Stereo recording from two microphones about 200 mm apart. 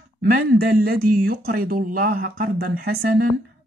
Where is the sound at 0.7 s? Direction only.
45° right (ahead or behind).